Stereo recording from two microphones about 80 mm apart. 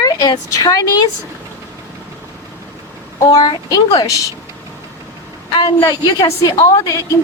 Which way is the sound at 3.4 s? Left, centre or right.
Left.